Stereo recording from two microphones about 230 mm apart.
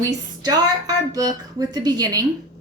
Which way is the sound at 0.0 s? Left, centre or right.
Centre.